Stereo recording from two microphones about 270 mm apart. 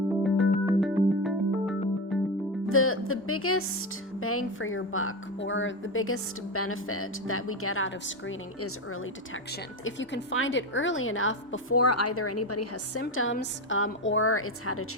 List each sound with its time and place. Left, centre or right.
0.2 s music: centre
2.6 s speech: left
11.8 s a woman's voice: left